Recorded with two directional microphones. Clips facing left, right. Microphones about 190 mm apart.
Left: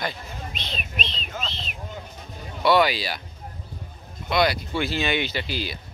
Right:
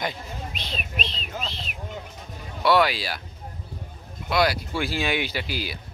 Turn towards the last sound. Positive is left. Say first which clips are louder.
# left 1 dB
turn(degrees=-10)  # may be behind; listen again after turning